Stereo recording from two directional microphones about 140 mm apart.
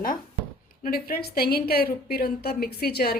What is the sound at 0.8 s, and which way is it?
A woman's voice, 90° left.